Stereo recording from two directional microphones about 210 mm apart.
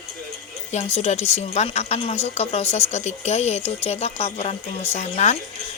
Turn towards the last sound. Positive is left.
turn(degrees=30)  # may be behind; listen again after turning